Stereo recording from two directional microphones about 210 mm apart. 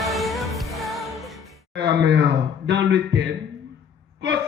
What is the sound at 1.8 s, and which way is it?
A man's voice, 55° right (ahead or behind).